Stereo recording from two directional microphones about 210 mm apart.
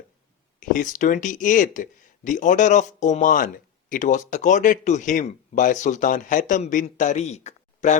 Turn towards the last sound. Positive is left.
turn(degrees=35)  # may be behind; listen again after turning